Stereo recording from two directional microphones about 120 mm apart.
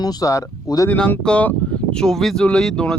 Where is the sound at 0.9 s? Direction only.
10° left (ahead or behind).